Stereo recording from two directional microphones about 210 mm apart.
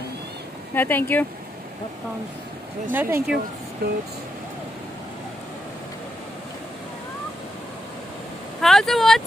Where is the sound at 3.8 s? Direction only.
50° right (ahead or behind).